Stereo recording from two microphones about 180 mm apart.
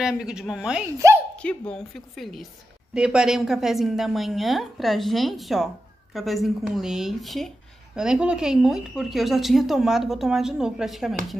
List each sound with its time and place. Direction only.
0.0 s speech: 5° right (ahead or behind)
0.9 s speech: 15° right (ahead or behind)
1.4 s speech: 5° left (ahead or behind)